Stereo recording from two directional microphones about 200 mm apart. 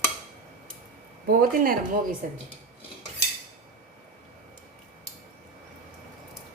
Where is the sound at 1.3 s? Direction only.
45° right (ahead or behind).